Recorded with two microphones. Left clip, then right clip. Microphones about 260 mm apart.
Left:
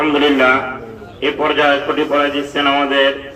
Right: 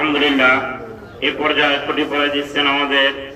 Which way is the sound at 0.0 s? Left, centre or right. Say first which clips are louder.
Left 2 dB; centre.